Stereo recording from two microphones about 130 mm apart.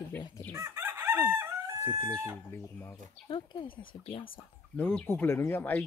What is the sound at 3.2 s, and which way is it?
Speech, 40° left (ahead or behind).